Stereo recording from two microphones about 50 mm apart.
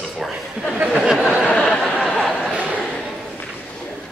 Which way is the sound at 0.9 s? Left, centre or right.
Centre.